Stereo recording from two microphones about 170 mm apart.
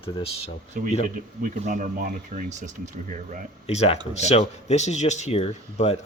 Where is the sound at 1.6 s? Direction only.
50° right (ahead or behind).